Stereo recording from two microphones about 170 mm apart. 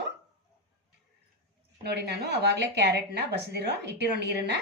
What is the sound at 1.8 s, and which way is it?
Speech, 75° right (ahead or behind).